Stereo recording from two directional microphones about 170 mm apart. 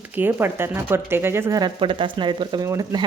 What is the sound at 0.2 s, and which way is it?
Speech, 10° right (ahead or behind).